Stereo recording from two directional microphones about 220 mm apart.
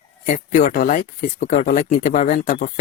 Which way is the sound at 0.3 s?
35° left (ahead or behind).